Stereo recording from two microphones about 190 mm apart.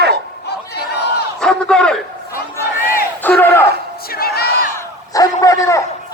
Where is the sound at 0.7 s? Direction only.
60° left (ahead or behind).